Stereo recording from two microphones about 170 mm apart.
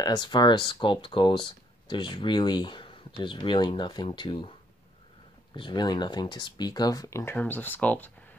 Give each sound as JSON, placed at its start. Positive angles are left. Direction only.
{"t": 0.0, "sound": "speech", "side_deg": 25}
{"t": 5.6, "sound": "speech", "side_deg": 25}